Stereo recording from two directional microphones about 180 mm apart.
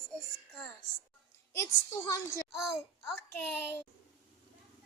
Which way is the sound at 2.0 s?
15° left (ahead or behind).